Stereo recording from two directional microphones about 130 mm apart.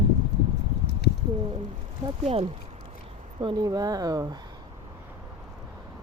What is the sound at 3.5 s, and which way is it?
Speech, 30° right (ahead or behind).